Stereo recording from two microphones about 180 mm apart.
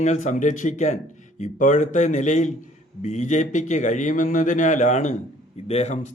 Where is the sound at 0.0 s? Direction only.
40° left (ahead or behind).